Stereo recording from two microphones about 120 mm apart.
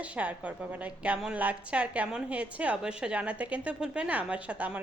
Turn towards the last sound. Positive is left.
turn(degrees=-10)  # may be behind; listen again after turning